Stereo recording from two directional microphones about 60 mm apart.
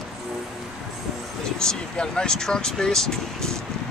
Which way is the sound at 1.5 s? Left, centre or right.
Centre.